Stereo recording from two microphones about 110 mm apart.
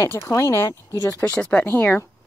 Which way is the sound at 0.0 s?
30° left (ahead or behind).